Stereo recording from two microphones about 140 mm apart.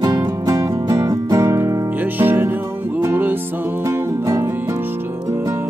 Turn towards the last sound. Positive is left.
turn(degrees=-20)  # may be behind; listen again after turning